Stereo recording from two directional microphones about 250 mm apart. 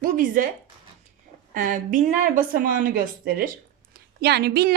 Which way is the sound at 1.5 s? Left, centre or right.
Right.